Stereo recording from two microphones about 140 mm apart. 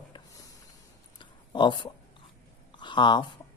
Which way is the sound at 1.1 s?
35° left (ahead or behind).